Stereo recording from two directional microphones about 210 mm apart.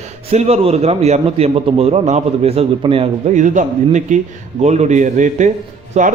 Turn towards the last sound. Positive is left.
turn(degrees=-35)  # may be behind; listen again after turning